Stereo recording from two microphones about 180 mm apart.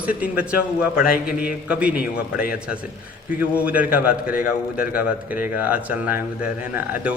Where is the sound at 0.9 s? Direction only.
55° left (ahead or behind).